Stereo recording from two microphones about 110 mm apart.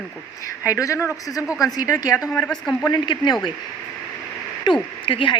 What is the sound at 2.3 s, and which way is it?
Speech, 10° left (ahead or behind).